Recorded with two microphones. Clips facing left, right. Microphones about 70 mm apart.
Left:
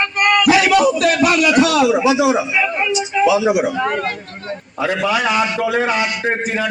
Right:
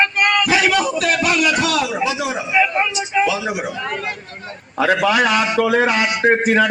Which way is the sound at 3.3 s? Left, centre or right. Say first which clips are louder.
Left 7 dB; centre.